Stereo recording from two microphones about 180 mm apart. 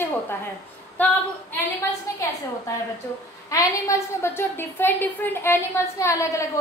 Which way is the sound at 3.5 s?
20° left (ahead or behind).